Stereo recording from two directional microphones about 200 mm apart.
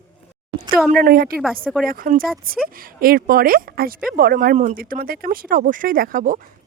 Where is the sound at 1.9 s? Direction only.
45° right (ahead or behind).